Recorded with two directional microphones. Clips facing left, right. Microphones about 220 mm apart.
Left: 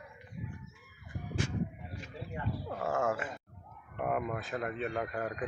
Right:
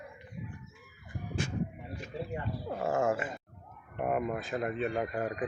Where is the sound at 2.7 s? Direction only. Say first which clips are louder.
Right 3 dB; 20° right (ahead or behind).